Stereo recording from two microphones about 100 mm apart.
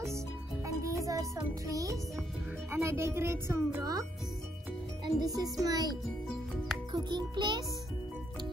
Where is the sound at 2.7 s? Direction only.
25° right (ahead or behind).